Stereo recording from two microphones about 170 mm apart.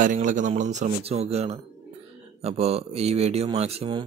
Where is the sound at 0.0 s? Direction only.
50° right (ahead or behind).